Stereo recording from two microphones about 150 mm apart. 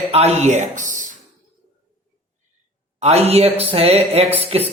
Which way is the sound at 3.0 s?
45° right (ahead or behind).